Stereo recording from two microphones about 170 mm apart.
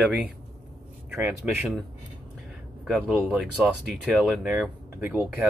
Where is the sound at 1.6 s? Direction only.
Centre (ahead or behind).